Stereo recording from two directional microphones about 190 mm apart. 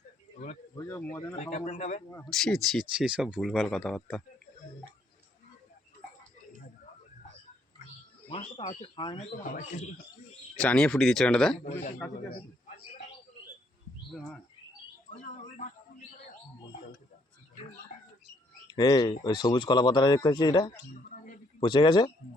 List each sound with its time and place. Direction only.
0.8 s speech: 10° left (ahead or behind)
1.4 s speech: 40° left (ahead or behind)
2.0 s speech: 15° left (ahead or behind)
2.3 s speech: centre (ahead or behind)
8.3 s speech: 30° left (ahead or behind)
9.4 s speech: 40° left (ahead or behind)
10.6 s speech: 5° left (ahead or behind)
11.6 s speech: 40° left (ahead or behind)
15.2 s a sound: 40° left (ahead or behind)
18.7 s speech: 20° left (ahead or behind)